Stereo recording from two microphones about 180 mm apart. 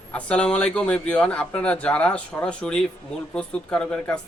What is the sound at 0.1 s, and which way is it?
Speech, 5° left (ahead or behind).